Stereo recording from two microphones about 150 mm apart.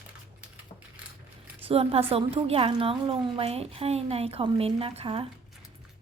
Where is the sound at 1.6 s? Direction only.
40° right (ahead or behind).